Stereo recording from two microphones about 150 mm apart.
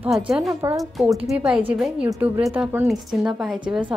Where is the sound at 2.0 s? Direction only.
20° right (ahead or behind).